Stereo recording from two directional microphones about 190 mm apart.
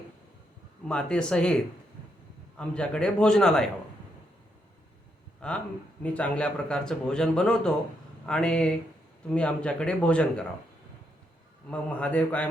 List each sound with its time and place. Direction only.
0.9 s a man's voice: 5° left (ahead or behind)
5.4 s a man's voice: 5° left (ahead or behind)
11.7 s a man's voice: 5° left (ahead or behind)